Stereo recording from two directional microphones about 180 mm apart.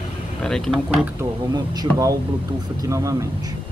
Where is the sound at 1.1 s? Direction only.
20° right (ahead or behind).